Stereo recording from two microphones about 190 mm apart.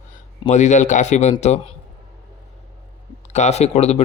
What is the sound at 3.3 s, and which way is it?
Speech, 35° left (ahead or behind).